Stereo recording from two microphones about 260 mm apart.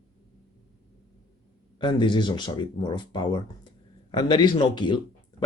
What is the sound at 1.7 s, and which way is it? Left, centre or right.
Speech, centre.